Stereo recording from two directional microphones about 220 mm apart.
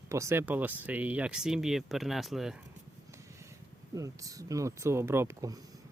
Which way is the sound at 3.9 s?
15° right (ahead or behind).